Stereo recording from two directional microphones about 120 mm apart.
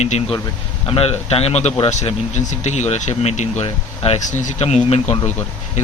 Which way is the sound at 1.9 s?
70° left (ahead or behind).